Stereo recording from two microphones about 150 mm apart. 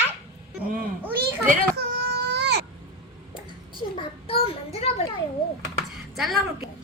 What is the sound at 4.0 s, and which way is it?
Child singing, 40° left (ahead or behind).